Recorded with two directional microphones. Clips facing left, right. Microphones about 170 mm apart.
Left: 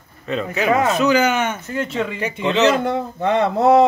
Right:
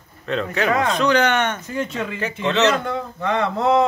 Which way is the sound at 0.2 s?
5° left (ahead or behind).